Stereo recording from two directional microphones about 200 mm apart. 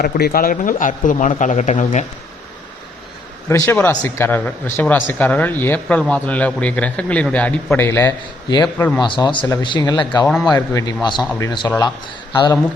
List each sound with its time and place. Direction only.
0.0 s speech: 45° left (ahead or behind)
3.5 s speech: 10° left (ahead or behind)
9.0 s speech: 20° left (ahead or behind)